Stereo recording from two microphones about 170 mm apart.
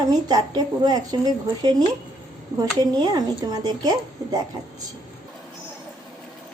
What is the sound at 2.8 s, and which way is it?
Speech, 25° right (ahead or behind).